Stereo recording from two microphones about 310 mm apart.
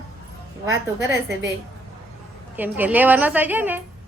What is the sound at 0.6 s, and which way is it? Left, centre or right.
Speech, centre.